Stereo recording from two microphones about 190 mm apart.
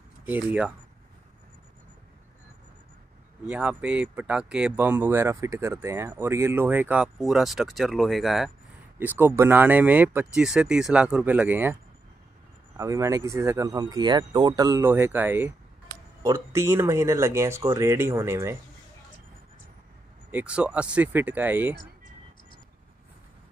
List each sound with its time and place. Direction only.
0.2 s speech: 10° right (ahead or behind)
3.4 s speech: 5° right (ahead or behind)
20.2 s speech: 5° right (ahead or behind)